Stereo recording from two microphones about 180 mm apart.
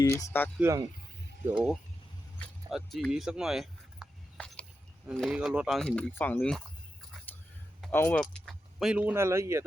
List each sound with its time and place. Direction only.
0.2 s speech: 10° left (ahead or behind)
0.6 s speech: 20° right (ahead or behind)
1.5 s speech: 5° right (ahead or behind)
2.6 s a sound: centre (ahead or behind)
5.1 s speech: centre (ahead or behind)
7.8 s speech: 10° left (ahead or behind); by 9.6 s 15° right (ahead or behind)